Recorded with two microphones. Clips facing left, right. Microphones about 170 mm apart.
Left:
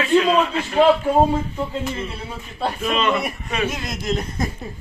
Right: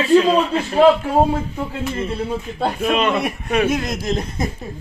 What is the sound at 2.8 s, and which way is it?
A man's voice, 60° right (ahead or behind).